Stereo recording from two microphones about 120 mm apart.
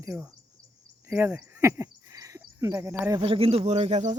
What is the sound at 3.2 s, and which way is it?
Speech, 50° right (ahead or behind).